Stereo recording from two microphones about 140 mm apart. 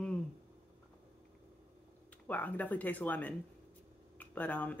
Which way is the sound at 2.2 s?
10° left (ahead or behind).